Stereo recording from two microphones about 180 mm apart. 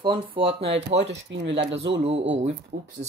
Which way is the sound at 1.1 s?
90° right.